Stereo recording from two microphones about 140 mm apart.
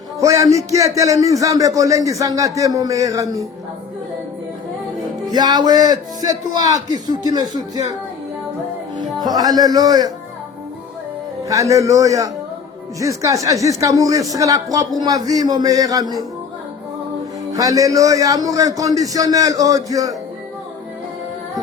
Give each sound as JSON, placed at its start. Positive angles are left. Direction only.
{"t": 0.2, "sound": "speech", "side_deg": -25}
{"t": 5.3, "sound": "speech", "side_deg": -30}
{"t": 9.0, "sound": "speech", "side_deg": -30}
{"t": 11.4, "sound": "speech", "side_deg": -25}
{"t": 17.5, "sound": "speech", "side_deg": -25}